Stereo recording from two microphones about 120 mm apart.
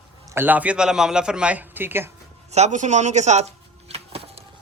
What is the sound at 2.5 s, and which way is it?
Speech, 65° right (ahead or behind).